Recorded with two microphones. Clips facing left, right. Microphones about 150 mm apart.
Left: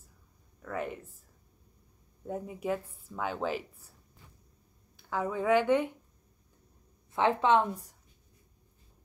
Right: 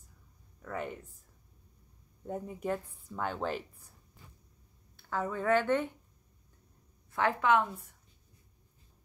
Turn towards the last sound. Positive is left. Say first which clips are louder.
# left 2 dB
turn(degrees=35)  # may be behind; listen again after turning